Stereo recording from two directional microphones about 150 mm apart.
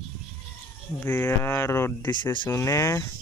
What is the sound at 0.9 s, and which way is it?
Speech, 15° left (ahead or behind).